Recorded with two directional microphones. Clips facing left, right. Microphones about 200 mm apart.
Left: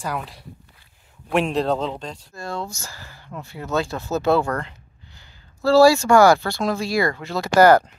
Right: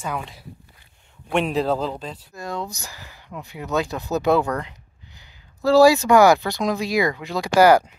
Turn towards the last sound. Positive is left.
turn(degrees=-10)  # may be behind; listen again after turning